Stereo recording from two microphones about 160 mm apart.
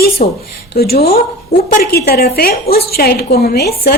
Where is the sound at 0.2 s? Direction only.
55° left (ahead or behind).